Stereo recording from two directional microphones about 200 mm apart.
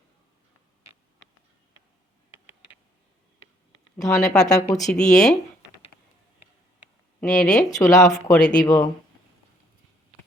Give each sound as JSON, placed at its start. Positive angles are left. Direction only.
{"t": 3.9, "sound": "speech", "side_deg": 15}
{"t": 4.4, "sound": "speech", "side_deg": 0}
{"t": 7.2, "sound": "speech", "side_deg": 5}
{"t": 7.6, "sound": "speech", "side_deg": 15}
{"t": 8.3, "sound": "speech", "side_deg": 5}
{"t": 8.6, "sound": "speech", "side_deg": 20}